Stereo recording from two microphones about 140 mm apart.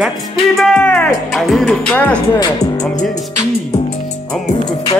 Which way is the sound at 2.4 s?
25° left (ahead or behind).